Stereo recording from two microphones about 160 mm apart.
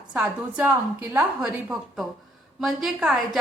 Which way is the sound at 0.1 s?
5° right (ahead or behind).